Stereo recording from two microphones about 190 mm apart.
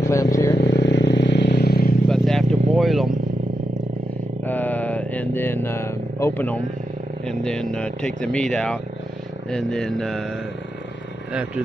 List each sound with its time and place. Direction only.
0.0 s vehicle: 15° left (ahead or behind)
0.7 s vehicle: 65° left (ahead or behind)
2.0 s vehicle: centre (ahead or behind)
4.5 s a sound: 10° left (ahead or behind)
7.2 s speech: 5° left (ahead or behind)